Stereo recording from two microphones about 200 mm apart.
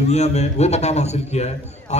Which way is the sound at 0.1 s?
35° left (ahead or behind).